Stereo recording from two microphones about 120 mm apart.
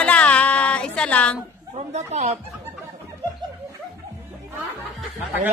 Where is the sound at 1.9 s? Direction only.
65° right (ahead or behind).